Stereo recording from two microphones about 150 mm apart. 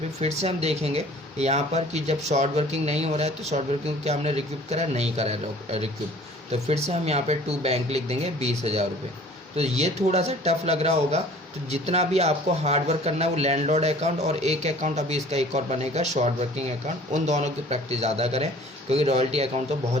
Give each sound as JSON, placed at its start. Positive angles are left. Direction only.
{"t": 0.2, "sound": "speech", "side_deg": -45}